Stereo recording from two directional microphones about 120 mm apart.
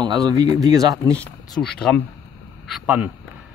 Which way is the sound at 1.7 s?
5° left (ahead or behind).